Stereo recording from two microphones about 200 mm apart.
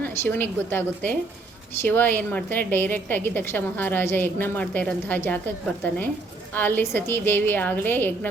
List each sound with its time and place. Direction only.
0.0 s a woman's voice: 10° left (ahead or behind)